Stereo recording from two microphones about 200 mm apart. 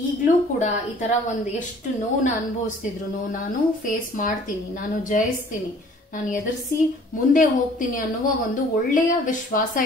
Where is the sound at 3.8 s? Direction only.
40° left (ahead or behind).